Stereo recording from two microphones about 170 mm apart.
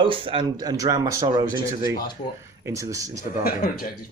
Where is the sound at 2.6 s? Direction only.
20° right (ahead or behind).